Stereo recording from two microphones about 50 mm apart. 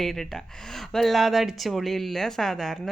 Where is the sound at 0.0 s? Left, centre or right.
Centre.